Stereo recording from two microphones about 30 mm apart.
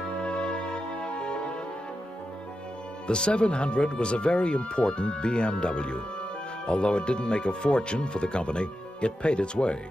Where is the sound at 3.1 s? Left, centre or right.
Left.